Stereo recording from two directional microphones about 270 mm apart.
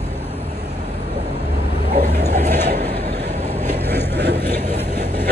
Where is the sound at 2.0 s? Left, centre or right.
Right.